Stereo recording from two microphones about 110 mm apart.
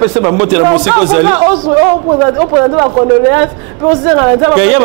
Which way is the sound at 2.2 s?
5° right (ahead or behind).